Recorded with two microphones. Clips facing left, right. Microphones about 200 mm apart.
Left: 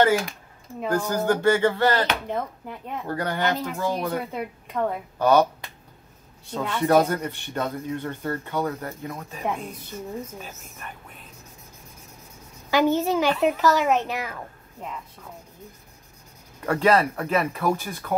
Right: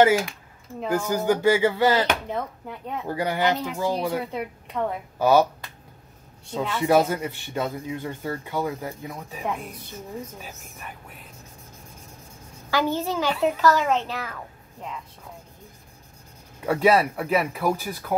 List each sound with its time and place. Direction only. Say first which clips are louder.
0.8 s speech: even; 10° right (ahead or behind)
3.1 s speech: right 2 dB; 10° right (ahead or behind)
4.3 s a woman's voice: even; 5° right (ahead or behind)
6.5 s speech: even; 5° right (ahead or behind)
12.7 s a child's voice: left 4 dB; 20° left (ahead or behind)
16.6 s speech: right 1 dB; 5° right (ahead or behind)